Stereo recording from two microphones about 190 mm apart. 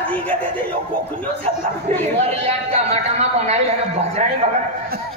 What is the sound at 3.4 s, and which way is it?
Speech, 35° right (ahead or behind).